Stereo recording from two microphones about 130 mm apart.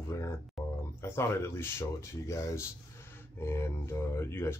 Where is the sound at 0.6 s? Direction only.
Centre (ahead or behind).